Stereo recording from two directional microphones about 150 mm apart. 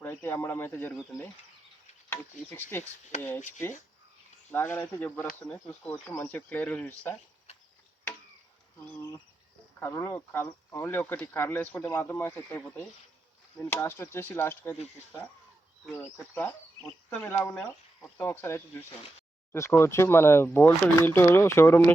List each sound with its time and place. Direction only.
0.0 s speech: 15° left (ahead or behind)
2.0 s speech: 15° left (ahead or behind)
4.5 s speech: 15° left (ahead or behind)
9.8 s speech: 15° left (ahead or behind)
16.1 s speech: 15° left (ahead or behind)
16.8 s speech: 5° left (ahead or behind)
17.2 s speech: 15° left (ahead or behind)